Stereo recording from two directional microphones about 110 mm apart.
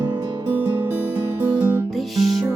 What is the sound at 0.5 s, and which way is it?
Music, 15° right (ahead or behind).